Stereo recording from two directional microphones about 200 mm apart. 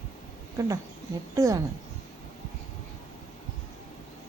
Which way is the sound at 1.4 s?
15° right (ahead or behind).